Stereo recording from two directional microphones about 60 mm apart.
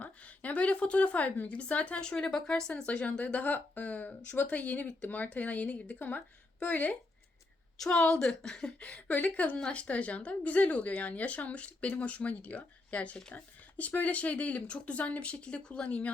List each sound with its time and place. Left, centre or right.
0.0 s a woman's voice: left
7.9 s a woman's voice: centre
8.8 s a woman's voice: left
9.6 s a woman's voice: centre
9.8 s a woman's voice: left